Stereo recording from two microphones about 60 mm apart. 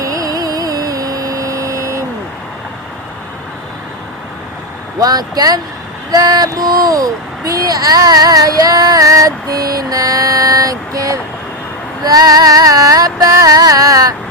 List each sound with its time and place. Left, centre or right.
0.0 s a sound: right
4.9 s speech: right
6.1 s child singing: right
12.0 s music: right